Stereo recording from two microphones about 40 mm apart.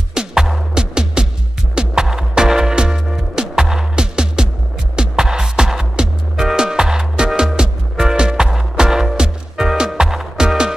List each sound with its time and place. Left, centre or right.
0.1 s music: centre